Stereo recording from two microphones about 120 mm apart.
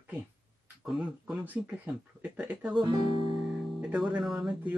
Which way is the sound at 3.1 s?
50° left (ahead or behind).